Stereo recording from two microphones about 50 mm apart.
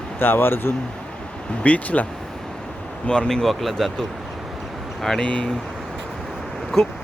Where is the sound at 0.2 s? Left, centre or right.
Left.